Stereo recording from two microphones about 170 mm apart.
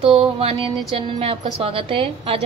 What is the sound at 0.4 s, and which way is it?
A woman's voice, 35° right (ahead or behind).